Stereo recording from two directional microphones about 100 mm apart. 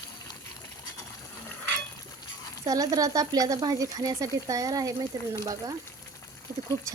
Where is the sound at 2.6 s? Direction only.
40° right (ahead or behind).